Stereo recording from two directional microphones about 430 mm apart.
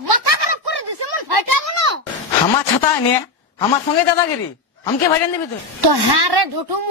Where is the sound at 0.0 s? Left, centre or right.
Right.